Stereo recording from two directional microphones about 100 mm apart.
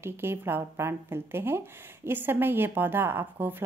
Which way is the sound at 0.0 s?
25° right (ahead or behind).